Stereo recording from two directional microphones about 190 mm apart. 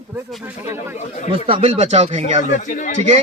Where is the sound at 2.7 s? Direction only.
45° left (ahead or behind).